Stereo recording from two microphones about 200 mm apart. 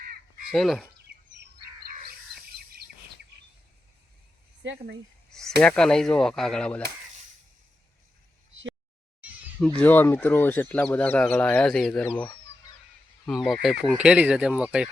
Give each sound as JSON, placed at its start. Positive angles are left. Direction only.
{"t": 0.5, "sound": "speech", "side_deg": 0}
{"t": 1.0, "sound": "chirp", "side_deg": -50}
{"t": 2.6, "sound": "bird vocalization", "side_deg": -50}
{"t": 4.6, "sound": "speech", "side_deg": -65}
{"t": 5.3, "sound": "speech", "side_deg": 0}
{"t": 9.6, "sound": "speech", "side_deg": 10}